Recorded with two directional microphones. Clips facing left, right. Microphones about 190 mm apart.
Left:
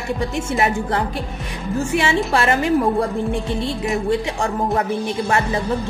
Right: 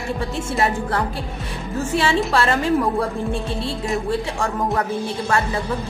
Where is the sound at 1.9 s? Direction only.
15° left (ahead or behind).